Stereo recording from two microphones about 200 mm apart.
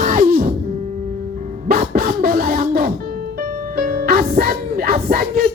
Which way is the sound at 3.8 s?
45° right (ahead or behind).